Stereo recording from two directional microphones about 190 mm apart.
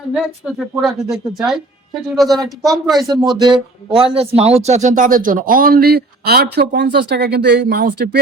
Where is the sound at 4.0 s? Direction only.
30° right (ahead or behind); by 8.2 s 60° right (ahead or behind).